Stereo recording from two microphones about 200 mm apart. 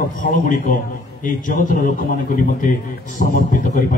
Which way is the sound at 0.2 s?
40° left (ahead or behind).